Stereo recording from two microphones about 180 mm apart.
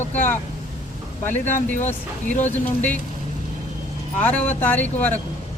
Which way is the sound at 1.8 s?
40° left (ahead or behind).